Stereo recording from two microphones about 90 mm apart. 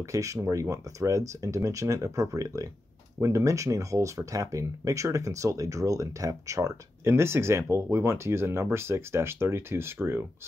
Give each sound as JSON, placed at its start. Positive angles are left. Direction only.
{"t": 0.0, "sound": "speech", "side_deg": -35}